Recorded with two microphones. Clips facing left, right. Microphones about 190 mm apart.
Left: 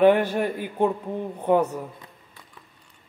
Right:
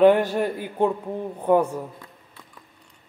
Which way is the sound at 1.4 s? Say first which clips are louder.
Right 1 dB; 10° right (ahead or behind).